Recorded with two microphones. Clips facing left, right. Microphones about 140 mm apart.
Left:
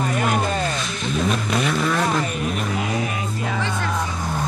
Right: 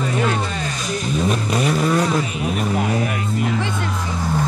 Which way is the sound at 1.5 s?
40° right (ahead or behind).